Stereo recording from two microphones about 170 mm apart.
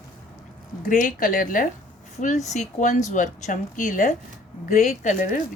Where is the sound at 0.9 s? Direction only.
50° left (ahead or behind).